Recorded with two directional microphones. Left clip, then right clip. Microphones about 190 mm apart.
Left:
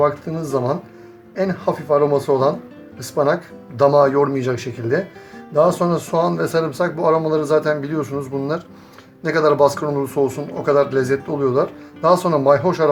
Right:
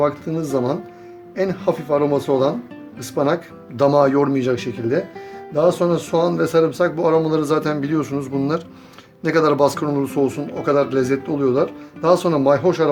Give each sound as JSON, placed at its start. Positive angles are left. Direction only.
{"t": 0.0, "sound": "speech", "side_deg": -35}